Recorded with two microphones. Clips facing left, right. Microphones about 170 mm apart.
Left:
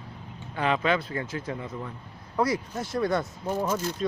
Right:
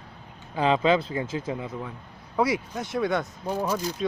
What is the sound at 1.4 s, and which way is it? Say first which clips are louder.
Speech: right 2 dB; 10° right (ahead or behind).